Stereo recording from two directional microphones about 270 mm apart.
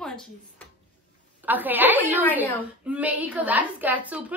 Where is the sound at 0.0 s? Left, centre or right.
Centre.